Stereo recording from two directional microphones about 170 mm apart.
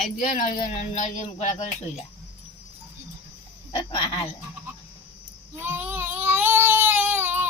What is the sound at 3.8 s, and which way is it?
Speech, 30° left (ahead or behind).